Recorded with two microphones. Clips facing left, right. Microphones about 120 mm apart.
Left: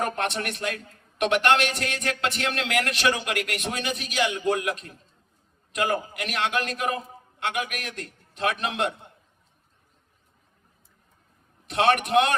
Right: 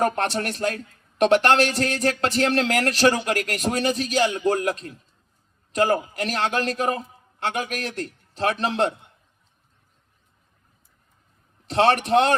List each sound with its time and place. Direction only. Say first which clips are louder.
0.0 s a man's voice: right 5 dB; 35° right (ahead or behind)
11.7 s a man's voice: right 3 dB; 30° right (ahead or behind)